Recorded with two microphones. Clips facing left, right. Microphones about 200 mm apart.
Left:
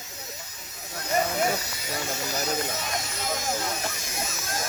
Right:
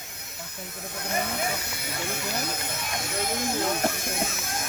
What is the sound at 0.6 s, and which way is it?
Speech, 55° right (ahead or behind).